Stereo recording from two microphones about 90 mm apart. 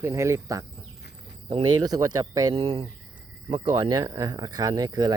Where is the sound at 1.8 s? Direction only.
45° right (ahead or behind).